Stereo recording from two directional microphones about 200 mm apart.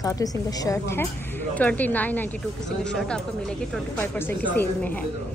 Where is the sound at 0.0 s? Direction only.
20° left (ahead or behind).